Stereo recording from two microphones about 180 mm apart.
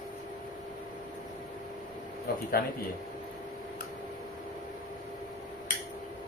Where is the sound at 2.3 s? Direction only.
60° left (ahead or behind).